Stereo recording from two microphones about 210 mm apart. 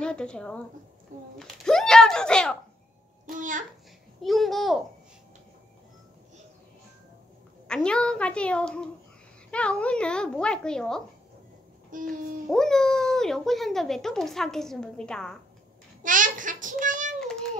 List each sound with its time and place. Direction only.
0.0 s speech: 5° left (ahead or behind)
3.3 s a child's voice: 40° right (ahead or behind)
4.2 s speech: centre (ahead or behind)
7.6 s speech: 5° left (ahead or behind)
11.9 s a child's voice: 40° right (ahead or behind)
12.4 s speech: centre (ahead or behind)
16.0 s a child's voice: 40° right (ahead or behind)
17.2 s child singing: 5° left (ahead or behind)